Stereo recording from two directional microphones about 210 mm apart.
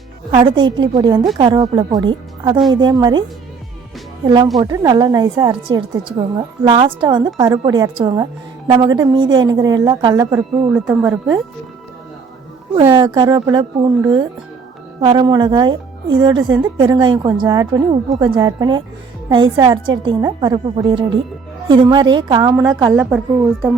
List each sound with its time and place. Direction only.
0.3 s a woman's voice: 25° right (ahead or behind)
4.5 s a woman's voice: 15° right (ahead or behind)
10.3 s speech: 5° right (ahead or behind)
12.7 s a woman's voice: 20° right (ahead or behind)
23.0 s speech: 5° right (ahead or behind)